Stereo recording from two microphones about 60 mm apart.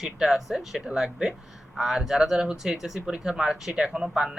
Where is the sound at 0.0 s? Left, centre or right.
Centre.